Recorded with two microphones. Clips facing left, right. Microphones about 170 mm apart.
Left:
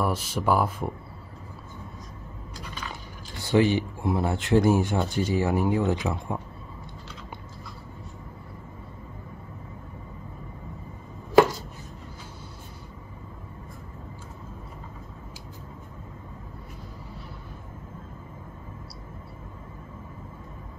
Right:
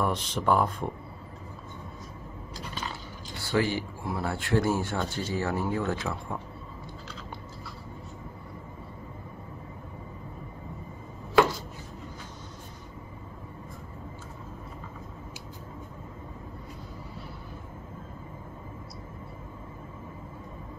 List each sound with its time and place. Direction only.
0.0 s speech: 5° left (ahead or behind)
2.9 s speech: 20° left (ahead or behind)